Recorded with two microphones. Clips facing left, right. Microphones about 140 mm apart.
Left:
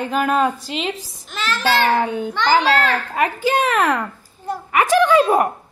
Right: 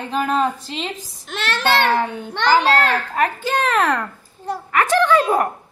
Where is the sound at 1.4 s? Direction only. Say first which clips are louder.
Even; 65° right (ahead or behind).